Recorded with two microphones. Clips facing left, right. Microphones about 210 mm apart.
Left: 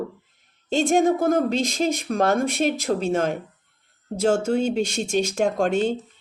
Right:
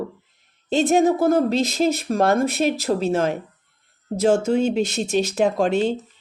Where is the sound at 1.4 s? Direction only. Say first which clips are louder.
Right 3 dB; 5° right (ahead or behind).